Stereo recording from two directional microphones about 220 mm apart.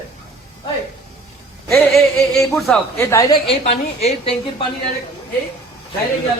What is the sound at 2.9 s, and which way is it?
Speech, 15° left (ahead or behind).